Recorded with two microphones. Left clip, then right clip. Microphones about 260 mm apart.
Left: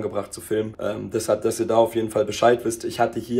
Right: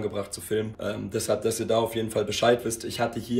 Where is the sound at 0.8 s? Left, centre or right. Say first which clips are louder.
Left 4 dB; centre.